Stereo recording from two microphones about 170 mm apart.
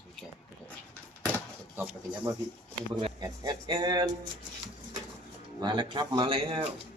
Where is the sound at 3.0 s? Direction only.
25° right (ahead or behind).